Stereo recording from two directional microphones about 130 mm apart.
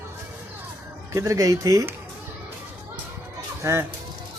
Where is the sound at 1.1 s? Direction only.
25° right (ahead or behind).